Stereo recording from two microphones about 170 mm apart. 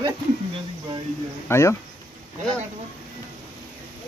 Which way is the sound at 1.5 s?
15° left (ahead or behind).